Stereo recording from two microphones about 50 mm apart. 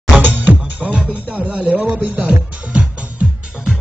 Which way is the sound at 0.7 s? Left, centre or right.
Right.